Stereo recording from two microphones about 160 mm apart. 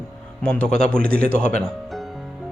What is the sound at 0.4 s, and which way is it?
Speech, 5° left (ahead or behind).